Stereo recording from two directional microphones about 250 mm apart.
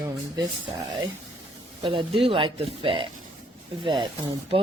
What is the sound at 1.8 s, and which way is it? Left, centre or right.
Speech, centre.